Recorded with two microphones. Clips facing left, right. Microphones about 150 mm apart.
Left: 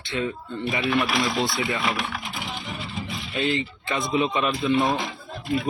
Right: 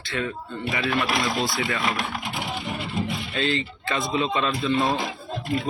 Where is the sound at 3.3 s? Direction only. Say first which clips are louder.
Left 2 dB; 20° left (ahead or behind).